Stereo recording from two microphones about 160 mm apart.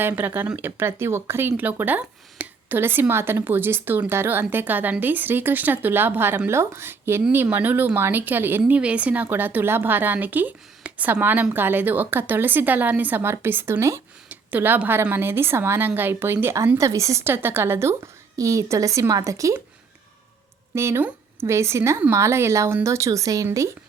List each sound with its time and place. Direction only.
0.0 s speech: 10° right (ahead or behind)
20.7 s speech: 15° right (ahead or behind)